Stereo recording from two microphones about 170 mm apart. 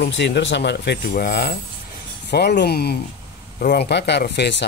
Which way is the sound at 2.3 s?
75° left (ahead or behind).